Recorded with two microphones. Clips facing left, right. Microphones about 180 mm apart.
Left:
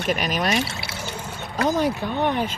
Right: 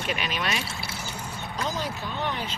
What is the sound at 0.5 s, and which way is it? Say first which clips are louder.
Pour: left 7 dB; 75° left (ahead or behind).